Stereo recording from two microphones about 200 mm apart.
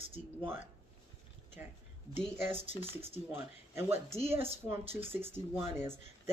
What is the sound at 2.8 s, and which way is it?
Speech, 25° left (ahead or behind).